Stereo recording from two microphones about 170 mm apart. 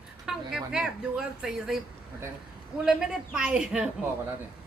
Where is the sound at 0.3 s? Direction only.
5° right (ahead or behind).